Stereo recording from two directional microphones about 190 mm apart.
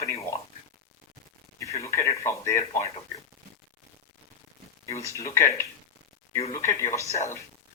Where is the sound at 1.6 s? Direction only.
15° left (ahead or behind).